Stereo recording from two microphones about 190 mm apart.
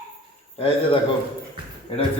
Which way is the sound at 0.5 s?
30° left (ahead or behind).